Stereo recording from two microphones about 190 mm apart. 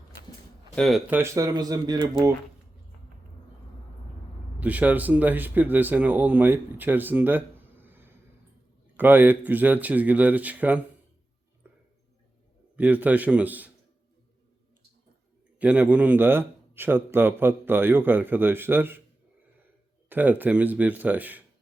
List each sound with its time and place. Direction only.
0.8 s speech: centre (ahead or behind)
1.2 s speech: 15° right (ahead or behind)
4.6 s a man's voice: 10° right (ahead or behind)
11.6 s a sound: 10° right (ahead or behind)
12.7 s a man's voice: 10° right (ahead or behind)
15.5 s a man's voice: 10° right (ahead or behind)
20.1 s a man's voice: 10° right (ahead or behind)